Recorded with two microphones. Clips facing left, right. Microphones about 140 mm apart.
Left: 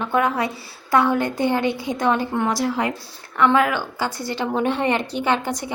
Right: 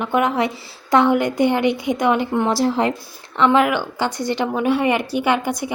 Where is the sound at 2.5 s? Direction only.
30° right (ahead or behind).